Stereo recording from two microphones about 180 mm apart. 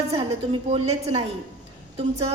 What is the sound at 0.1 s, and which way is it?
A woman's voice, 35° right (ahead or behind).